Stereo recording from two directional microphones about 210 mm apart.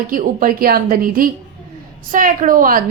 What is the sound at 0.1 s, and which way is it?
Speech, 40° right (ahead or behind).